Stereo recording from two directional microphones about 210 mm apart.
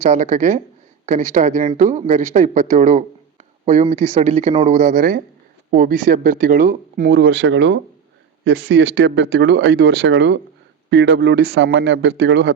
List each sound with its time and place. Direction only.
0.1 s speech: 35° right (ahead or behind); by 12.5 s 55° right (ahead or behind)